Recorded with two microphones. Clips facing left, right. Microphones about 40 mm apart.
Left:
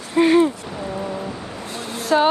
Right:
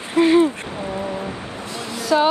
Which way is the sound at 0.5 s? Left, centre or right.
Right.